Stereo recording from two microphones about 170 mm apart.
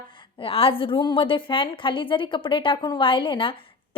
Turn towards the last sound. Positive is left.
turn(degrees=30)  # may be behind; listen again after turning